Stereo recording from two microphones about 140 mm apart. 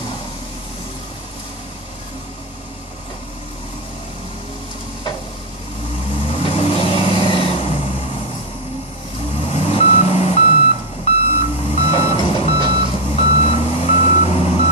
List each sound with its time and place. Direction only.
6.2 s vehicle: 45° left (ahead or behind)
9.4 s reversing beeps: 40° left (ahead or behind)